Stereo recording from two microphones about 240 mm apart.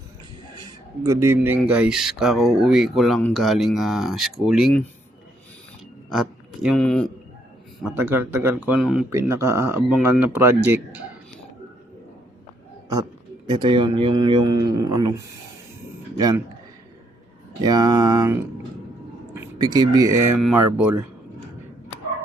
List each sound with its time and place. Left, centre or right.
0.6 s speech: centre
6.1 s speech: centre
13.5 s speech: centre
17.6 s speech: centre